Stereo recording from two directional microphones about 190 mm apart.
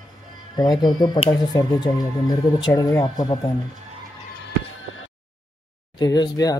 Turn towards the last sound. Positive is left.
turn(degrees=20)  # may be behind; listen again after turning